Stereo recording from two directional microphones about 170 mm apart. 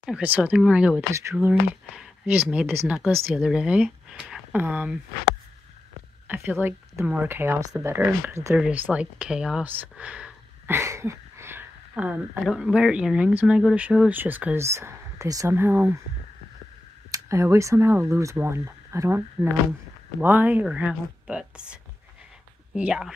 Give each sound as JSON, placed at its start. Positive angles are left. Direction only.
{"t": 0.0, "sound": "speech", "side_deg": -5}
{"t": 6.2, "sound": "speech", "side_deg": -10}
{"t": 10.8, "sound": "speech", "side_deg": -15}
{"t": 17.1, "sound": "speech", "side_deg": -20}
{"t": 22.8, "sound": "speech", "side_deg": -5}